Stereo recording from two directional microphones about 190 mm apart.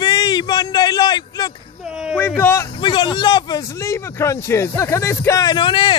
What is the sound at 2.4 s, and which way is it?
Speech, 10° left (ahead or behind).